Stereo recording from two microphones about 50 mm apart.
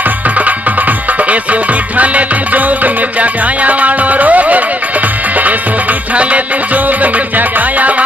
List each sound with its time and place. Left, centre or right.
1.3 s music: right
6.1 s music: right